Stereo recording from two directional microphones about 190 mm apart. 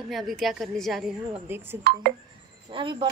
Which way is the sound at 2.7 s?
25° right (ahead or behind).